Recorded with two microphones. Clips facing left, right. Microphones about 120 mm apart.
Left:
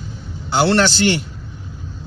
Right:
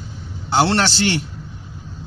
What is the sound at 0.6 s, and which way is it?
Speech, 30° right (ahead or behind).